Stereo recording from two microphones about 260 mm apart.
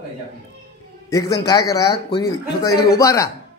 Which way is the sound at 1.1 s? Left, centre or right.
Centre.